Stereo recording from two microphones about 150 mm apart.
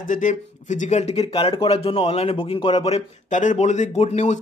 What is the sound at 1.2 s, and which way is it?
A man's voice, 35° left (ahead or behind).